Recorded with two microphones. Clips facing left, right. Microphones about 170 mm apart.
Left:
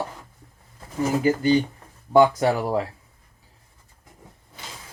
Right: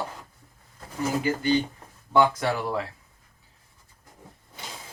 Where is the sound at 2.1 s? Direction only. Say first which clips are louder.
Left 5 dB; 40° left (ahead or behind).